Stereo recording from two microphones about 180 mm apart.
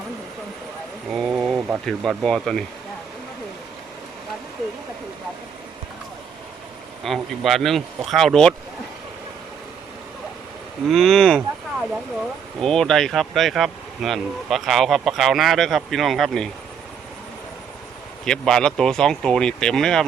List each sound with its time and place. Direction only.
1.1 s speech: 5° right (ahead or behind)
7.0 s speech: centre (ahead or behind)
10.8 s speech: centre (ahead or behind)
12.5 s speech: 5° left (ahead or behind)
18.3 s speech: 5° left (ahead or behind)